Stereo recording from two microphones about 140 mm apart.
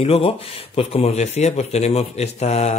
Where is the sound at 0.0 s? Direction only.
45° left (ahead or behind).